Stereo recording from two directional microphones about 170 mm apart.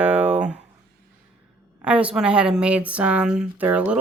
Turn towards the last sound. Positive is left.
turn(degrees=-10)  # may be behind; listen again after turning